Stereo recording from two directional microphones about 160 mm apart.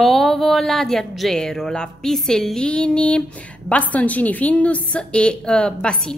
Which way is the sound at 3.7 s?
10° left (ahead or behind).